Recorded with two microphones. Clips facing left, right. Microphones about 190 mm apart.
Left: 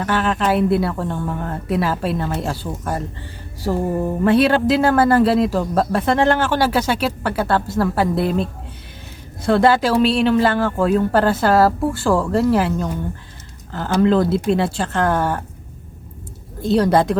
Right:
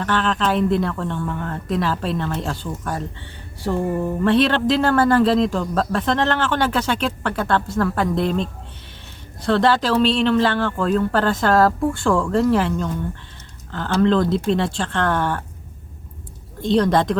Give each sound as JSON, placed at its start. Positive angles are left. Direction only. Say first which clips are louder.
{"t": 0.0, "sound": "a man's voice", "louder": "left 2 dB", "side_deg": 10}
{"t": 3.7, "sound": "a sound", "louder": "left 1 dB", "side_deg": 25}
{"t": 4.2, "sound": "a man's voice", "louder": "left 3 dB", "side_deg": 10}
{"t": 16.6, "sound": "a man's voice", "louder": "left 2 dB", "side_deg": 5}